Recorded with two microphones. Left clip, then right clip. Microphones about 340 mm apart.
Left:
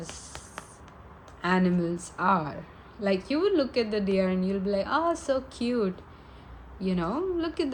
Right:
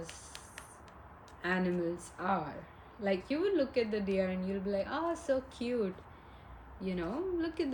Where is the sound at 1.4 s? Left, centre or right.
Left.